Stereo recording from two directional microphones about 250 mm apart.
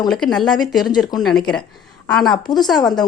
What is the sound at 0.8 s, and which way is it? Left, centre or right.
Speech, centre.